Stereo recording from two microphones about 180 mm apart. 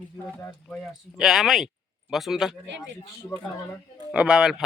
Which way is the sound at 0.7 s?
Centre (ahead or behind).